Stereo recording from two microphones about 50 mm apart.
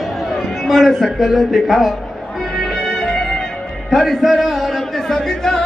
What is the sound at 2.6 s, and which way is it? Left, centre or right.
Music, centre.